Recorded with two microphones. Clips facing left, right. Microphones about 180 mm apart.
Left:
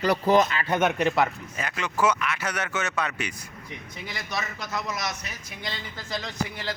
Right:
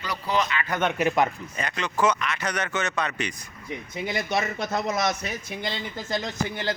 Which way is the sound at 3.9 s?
25° right (ahead or behind).